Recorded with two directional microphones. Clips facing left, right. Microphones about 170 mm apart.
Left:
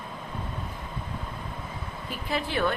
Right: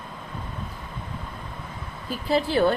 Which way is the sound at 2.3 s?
35° right (ahead or behind).